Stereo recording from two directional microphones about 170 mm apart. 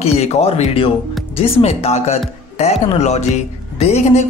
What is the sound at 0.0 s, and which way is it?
Speech, 40° left (ahead or behind).